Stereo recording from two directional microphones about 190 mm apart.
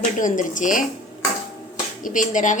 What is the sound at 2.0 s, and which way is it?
Speech, 45° left (ahead or behind).